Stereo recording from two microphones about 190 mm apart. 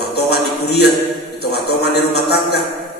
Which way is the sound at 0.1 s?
60° left (ahead or behind).